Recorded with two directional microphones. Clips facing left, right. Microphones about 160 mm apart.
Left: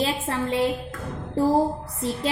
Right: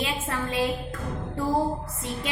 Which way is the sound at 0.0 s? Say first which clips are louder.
Left 4 dB; 25° left (ahead or behind).